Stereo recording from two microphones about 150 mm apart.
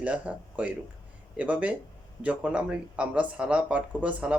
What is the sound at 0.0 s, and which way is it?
Speech, 10° right (ahead or behind).